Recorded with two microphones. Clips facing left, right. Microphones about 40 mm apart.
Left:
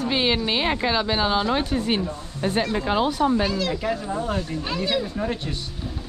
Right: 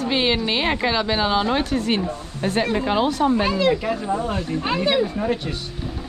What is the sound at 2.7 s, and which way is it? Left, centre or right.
Speech, right.